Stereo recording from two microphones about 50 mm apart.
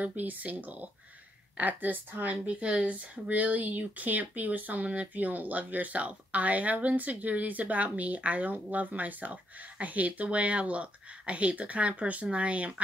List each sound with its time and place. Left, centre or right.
0.0 s speech: right